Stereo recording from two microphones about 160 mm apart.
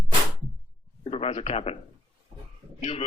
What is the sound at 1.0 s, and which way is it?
Speech, 40° left (ahead or behind).